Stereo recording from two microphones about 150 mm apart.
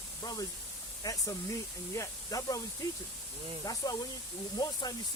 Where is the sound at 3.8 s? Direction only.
25° left (ahead or behind).